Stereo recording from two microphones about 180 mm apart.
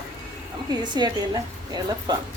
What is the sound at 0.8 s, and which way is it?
Speech, 25° right (ahead or behind).